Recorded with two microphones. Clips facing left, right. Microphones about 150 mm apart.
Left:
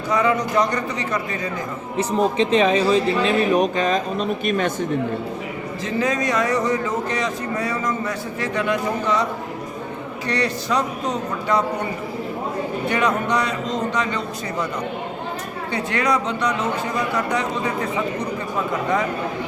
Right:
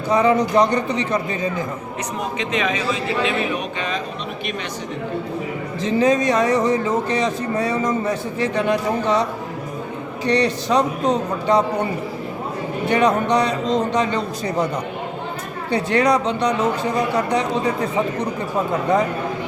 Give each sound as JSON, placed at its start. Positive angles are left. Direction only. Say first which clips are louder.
{"t": 0.1, "sound": "speech", "louder": "right 3 dB", "side_deg": -30}
{"t": 2.0, "sound": "speech", "louder": "left 9 dB", "side_deg": 30}
{"t": 5.8, "sound": "speech", "louder": "right 5 dB", "side_deg": -30}
{"t": 10.2, "sound": "speech", "louder": "right 5 dB", "side_deg": -25}
{"t": 12.9, "sound": "speech", "louder": "right 5 dB", "side_deg": -30}
{"t": 15.7, "sound": "speech", "louder": "right 5 dB", "side_deg": -30}